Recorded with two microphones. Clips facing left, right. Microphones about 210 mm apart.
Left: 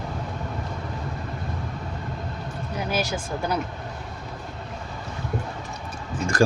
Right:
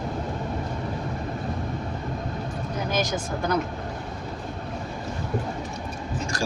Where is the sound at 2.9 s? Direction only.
10° left (ahead or behind).